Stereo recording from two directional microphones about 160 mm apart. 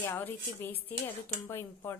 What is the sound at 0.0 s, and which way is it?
A woman's voice, 15° left (ahead or behind).